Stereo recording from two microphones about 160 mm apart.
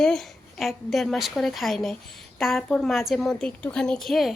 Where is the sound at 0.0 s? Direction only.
Centre (ahead or behind).